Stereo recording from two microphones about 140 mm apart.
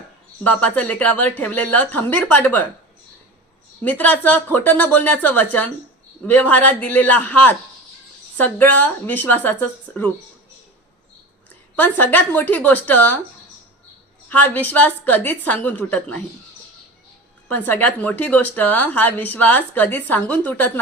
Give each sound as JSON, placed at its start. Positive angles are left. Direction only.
{"t": 0.4, "sound": "a woman's voice", "side_deg": 10}
{"t": 3.8, "sound": "a woman's voice", "side_deg": 10}
{"t": 11.8, "sound": "a woman's voice", "side_deg": 15}
{"t": 14.3, "sound": "a woman's voice", "side_deg": 10}
{"t": 17.5, "sound": "a woman's voice", "side_deg": 15}